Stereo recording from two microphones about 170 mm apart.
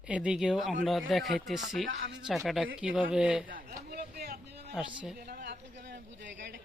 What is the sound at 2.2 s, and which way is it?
Speech, centre (ahead or behind).